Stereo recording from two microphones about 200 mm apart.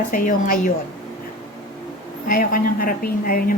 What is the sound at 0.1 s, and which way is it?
Speech, 45° left (ahead or behind).